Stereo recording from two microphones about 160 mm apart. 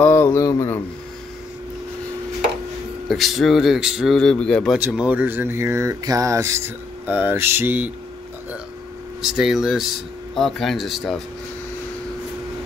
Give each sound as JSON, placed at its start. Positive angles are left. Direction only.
{"t": 0.0, "sound": "a sound", "side_deg": 15}
{"t": 3.1, "sound": "speech", "side_deg": 0}
{"t": 4.7, "sound": "speech", "side_deg": -10}
{"t": 9.2, "sound": "speech", "side_deg": 0}